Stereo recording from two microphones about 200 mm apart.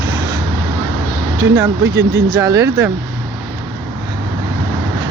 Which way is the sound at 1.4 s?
15° right (ahead or behind).